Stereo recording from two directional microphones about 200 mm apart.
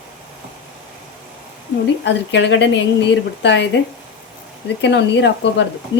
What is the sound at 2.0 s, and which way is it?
A woman's voice, 60° left (ahead or behind).